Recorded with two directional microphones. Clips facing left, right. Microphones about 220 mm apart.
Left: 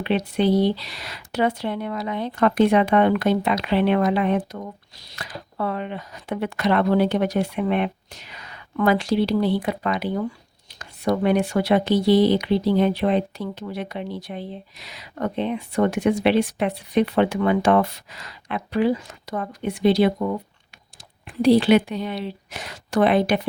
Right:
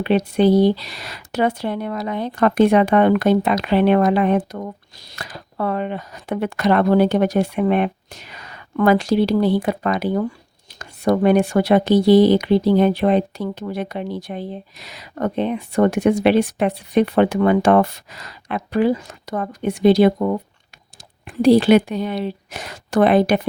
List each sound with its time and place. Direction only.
0.0 s speech: 45° right (ahead or behind)
21.4 s speech: 45° right (ahead or behind)